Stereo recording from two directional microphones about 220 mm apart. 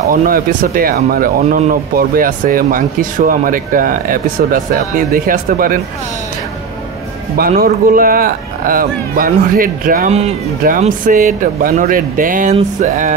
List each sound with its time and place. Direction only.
0.1 s speech: 40° right (ahead or behind)
7.3 s speech: 45° right (ahead or behind)